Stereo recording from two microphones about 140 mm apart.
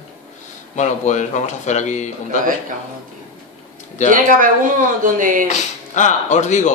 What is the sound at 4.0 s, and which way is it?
Speech, 60° left (ahead or behind).